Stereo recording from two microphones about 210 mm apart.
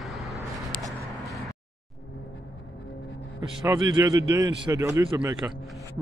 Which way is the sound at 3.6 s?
15° right (ahead or behind).